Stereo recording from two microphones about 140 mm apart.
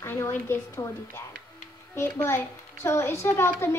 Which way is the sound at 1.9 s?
20° left (ahead or behind).